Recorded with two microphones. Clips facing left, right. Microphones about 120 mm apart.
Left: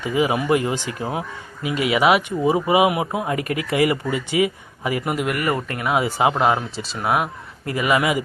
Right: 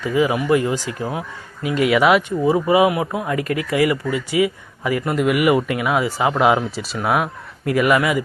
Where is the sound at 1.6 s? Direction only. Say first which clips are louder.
Right 4 dB; 45° right (ahead or behind).